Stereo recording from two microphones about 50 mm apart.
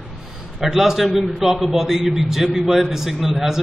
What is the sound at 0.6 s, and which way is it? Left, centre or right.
A man's voice, centre.